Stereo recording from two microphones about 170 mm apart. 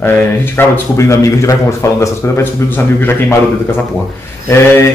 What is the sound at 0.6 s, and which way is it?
A man's voice, 15° left (ahead or behind).